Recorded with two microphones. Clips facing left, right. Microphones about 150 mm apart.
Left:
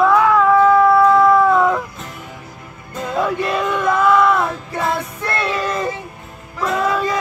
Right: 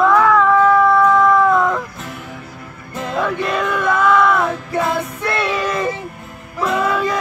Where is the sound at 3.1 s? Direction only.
5° left (ahead or behind).